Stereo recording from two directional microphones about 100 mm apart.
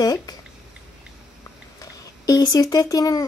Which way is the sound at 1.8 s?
40° left (ahead or behind).